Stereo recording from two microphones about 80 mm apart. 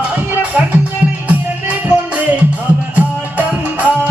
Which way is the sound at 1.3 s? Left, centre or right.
Centre.